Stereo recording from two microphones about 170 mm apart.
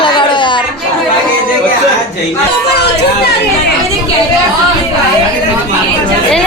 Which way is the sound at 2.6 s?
75° left (ahead or behind).